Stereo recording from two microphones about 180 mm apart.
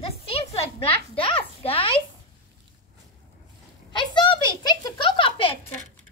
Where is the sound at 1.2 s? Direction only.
30° left (ahead or behind).